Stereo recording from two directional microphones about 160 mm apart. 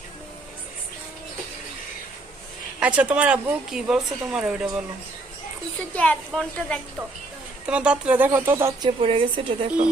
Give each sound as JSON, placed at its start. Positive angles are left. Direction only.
{"t": 2.8, "sound": "speech", "side_deg": -10}
{"t": 5.9, "sound": "speech", "side_deg": 5}
{"t": 7.7, "sound": "speech", "side_deg": -5}
{"t": 8.8, "sound": "a woman's voice", "side_deg": -35}